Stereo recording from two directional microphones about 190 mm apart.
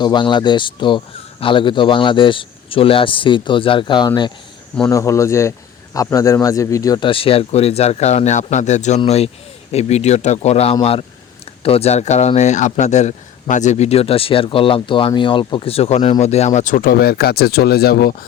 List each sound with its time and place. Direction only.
0.0 s speech: 25° left (ahead or behind); by 18.2 s 55° left (ahead or behind)